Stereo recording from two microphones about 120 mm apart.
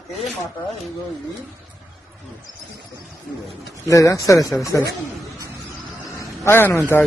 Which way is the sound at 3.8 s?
25° left (ahead or behind).